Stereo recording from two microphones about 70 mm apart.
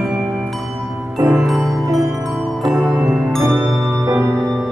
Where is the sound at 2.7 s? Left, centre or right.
Centre.